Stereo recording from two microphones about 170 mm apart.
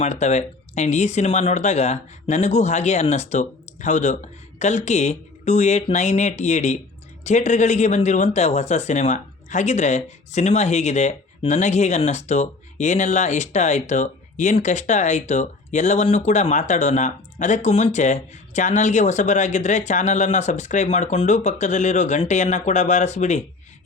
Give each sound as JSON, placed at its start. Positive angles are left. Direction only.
{"t": 0.0, "sound": "speech", "side_deg": 40}